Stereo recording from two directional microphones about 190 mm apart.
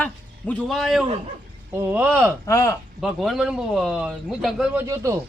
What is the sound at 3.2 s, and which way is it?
Speech, centre (ahead or behind).